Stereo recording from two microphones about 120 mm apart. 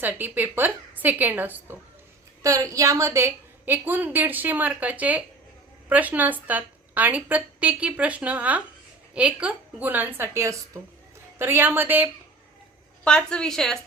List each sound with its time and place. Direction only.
0.0 s a woman's voice: 15° right (ahead or behind)
2.4 s a woman's voice: 25° right (ahead or behind)
13.1 s a woman's voice: 5° left (ahead or behind)